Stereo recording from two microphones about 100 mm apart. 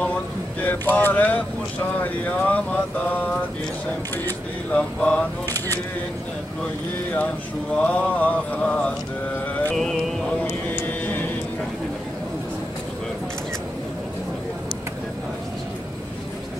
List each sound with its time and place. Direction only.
0.6 s mantra: 15° left (ahead or behind)
4.6 s mantra: 10° left (ahead or behind)
7.7 s mantra: 10° left (ahead or behind)
9.8 s music: 5° left (ahead or behind)
10.7 s a sound: 20° left (ahead or behind)